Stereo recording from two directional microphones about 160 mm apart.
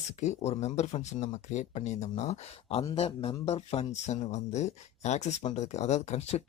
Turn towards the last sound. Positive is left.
turn(degrees=45)  # may be behind; listen again after turning